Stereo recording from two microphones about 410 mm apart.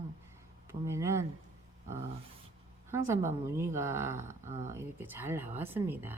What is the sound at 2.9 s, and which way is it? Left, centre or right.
A woman's voice, centre.